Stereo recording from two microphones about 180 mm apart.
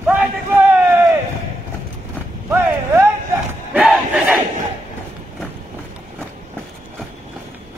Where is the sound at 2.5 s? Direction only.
10° right (ahead or behind).